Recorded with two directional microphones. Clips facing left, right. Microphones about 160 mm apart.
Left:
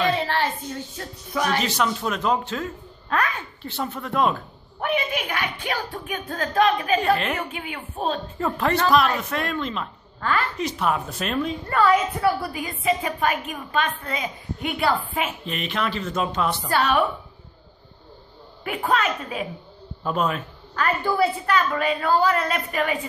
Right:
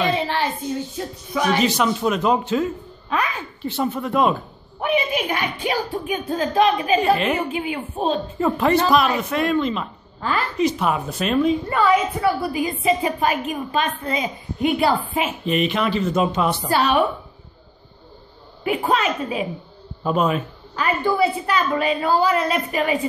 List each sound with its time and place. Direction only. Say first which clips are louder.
0.3 s speech: right 2 dB; 5° right (ahead or behind); by 7.0 s 20° right (ahead or behind)
7.0 s a woman's voice: right 3 dB; 5° right (ahead or behind)
7.3 s a woman's voice: right 7 dB; 30° right (ahead or behind)
8.4 s a woman's voice: right 5 dB; 5° right (ahead or behind)
12.5 s a woman's voice: right 4 dB; 20° right (ahead or behind)
15.4 s speech: right 7 dB; 5° right (ahead or behind)
18.6 s a woman's voice: right 3 dB; 15° right (ahead or behind)
20.0 s speech: right 4 dB; 5° right (ahead or behind)
21.0 s a woman's voice: right 3 dB; 5° left (ahead or behind)
21.6 s a woman's voice: right 3 dB; 20° right (ahead or behind)
22.1 s speech: right 1 dB; 10° right (ahead or behind)
22.4 s a woman's voice: right 3 dB; 20° right (ahead or behind)